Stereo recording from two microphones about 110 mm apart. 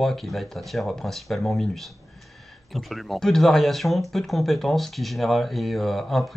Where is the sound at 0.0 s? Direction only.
Centre (ahead or behind).